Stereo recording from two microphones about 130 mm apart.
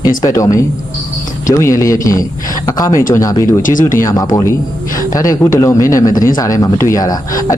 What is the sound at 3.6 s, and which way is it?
Speech, 90° left.